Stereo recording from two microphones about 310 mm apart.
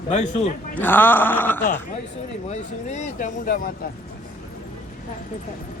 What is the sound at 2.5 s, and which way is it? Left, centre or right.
Speech, left.